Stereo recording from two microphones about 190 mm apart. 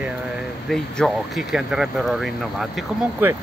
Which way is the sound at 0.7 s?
Centre (ahead or behind).